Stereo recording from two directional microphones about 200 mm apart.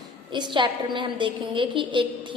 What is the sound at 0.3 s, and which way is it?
A woman's voice, 20° right (ahead or behind).